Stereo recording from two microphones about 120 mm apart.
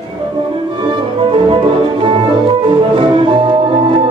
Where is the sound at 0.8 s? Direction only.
45° right (ahead or behind).